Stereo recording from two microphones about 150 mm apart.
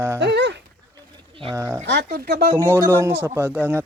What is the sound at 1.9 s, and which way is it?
Speech, 90° right.